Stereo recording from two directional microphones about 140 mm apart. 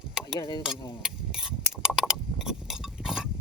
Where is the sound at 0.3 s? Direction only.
30° left (ahead or behind).